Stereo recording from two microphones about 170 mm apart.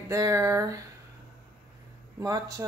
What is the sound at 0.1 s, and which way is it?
Speech, 20° right (ahead or behind).